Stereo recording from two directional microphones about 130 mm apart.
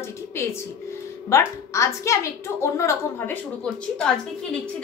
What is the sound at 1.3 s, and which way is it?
A woman's voice, 20° left (ahead or behind).